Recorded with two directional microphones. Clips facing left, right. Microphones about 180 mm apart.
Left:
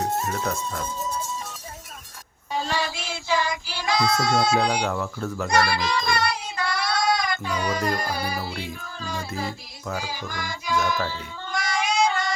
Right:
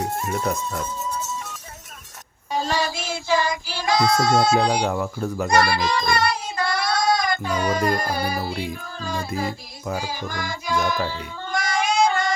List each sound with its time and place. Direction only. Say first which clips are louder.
2.5 s child singing: right 3 dB; 40° right (ahead or behind)
4.9 s speech: right 3 dB; 15° right (ahead or behind)
5.5 s child singing: right 3 dB; 45° right (ahead or behind)
8.6 s music: right 4 dB; 45° right (ahead or behind)
11.1 s cat: right 3 dB; 45° right (ahead or behind)